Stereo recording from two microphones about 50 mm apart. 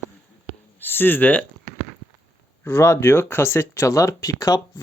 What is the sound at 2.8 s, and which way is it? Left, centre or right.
Speech, left.